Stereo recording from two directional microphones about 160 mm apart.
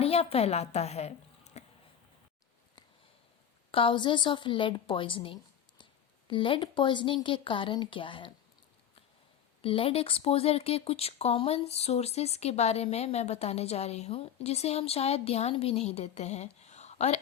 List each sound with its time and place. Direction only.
0.0 s a woman's voice: 40° left (ahead or behind)
3.7 s a woman's voice: 35° left (ahead or behind)
9.6 s speech: 35° left (ahead or behind)